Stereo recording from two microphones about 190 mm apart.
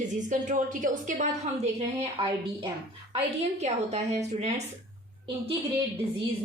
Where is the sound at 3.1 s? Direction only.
35° right (ahead or behind).